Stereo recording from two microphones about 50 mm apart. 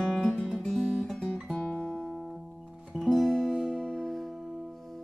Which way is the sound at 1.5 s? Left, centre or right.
Left.